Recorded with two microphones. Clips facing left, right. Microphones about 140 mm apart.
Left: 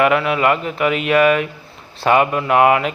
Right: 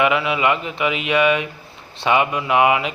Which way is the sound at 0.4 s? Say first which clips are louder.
Left 3 dB; 45° left (ahead or behind).